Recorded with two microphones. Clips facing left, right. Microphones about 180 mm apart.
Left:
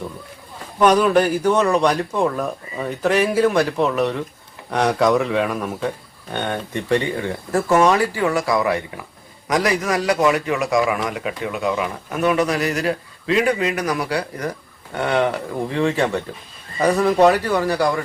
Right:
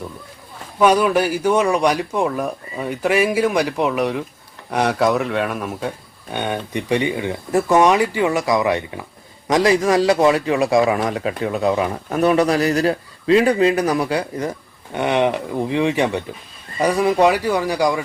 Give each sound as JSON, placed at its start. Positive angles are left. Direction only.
{"t": 0.8, "sound": "a man's voice", "side_deg": -10}